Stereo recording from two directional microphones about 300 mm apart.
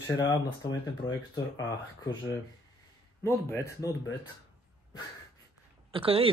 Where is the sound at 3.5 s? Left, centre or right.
Centre.